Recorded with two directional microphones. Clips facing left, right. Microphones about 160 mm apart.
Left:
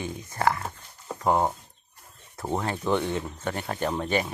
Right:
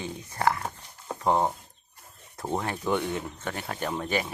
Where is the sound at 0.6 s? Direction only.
5° right (ahead or behind).